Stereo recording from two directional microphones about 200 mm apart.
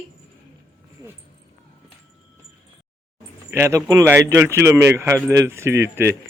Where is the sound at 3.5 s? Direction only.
15° right (ahead or behind).